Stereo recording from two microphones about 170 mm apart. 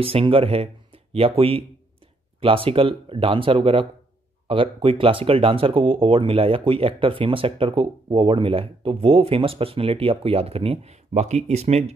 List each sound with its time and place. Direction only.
0.0 s speech: 35° right (ahead or behind)